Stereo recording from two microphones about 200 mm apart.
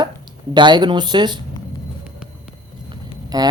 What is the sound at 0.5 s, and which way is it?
Speech, 20° right (ahead or behind).